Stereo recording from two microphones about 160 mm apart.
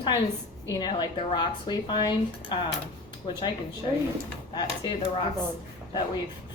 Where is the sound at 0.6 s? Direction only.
25° left (ahead or behind).